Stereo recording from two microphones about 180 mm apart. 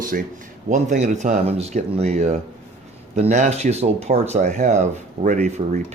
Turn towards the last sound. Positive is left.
turn(degrees=-45)  # may be behind; listen again after turning